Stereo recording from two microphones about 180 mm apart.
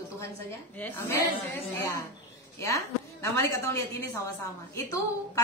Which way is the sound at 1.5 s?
15° left (ahead or behind).